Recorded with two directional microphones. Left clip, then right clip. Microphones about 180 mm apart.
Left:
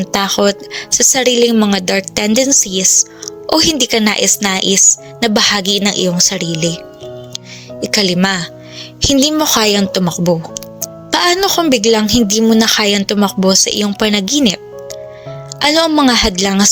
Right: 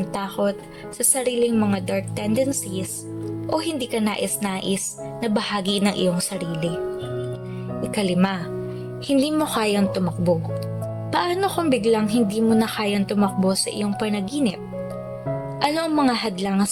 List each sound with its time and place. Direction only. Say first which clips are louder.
0.0 s a woman's voice: left 11 dB; 45° left (ahead or behind)
7.8 s a woman's voice: left 10 dB; 35° left (ahead or behind)